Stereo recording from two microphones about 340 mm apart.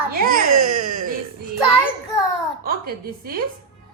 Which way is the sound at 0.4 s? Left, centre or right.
Right.